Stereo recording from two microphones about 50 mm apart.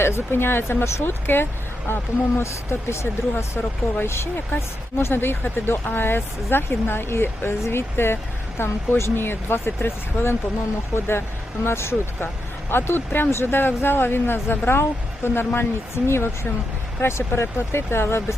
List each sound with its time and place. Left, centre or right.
0.0 s speech: left
2.4 s speech: left